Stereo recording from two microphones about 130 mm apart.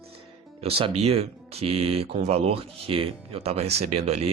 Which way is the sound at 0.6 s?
50° right (ahead or behind).